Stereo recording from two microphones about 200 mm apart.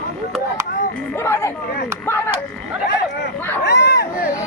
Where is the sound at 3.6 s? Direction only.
55° left (ahead or behind).